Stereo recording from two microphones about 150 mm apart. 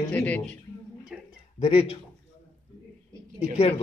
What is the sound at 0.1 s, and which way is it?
Speech, 10° left (ahead or behind).